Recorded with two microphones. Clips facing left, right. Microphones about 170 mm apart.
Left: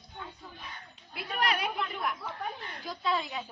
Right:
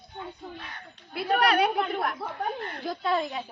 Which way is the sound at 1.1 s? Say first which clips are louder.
Right 9 dB; 65° right (ahead or behind).